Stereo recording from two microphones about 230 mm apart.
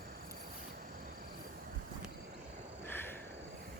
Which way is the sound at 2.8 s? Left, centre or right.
Centre.